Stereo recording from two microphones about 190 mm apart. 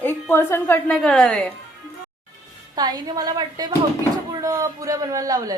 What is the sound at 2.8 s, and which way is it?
A woman's voice, 20° right (ahead or behind).